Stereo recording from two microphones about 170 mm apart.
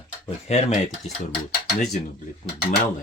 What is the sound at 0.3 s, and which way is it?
Speech, 40° left (ahead or behind).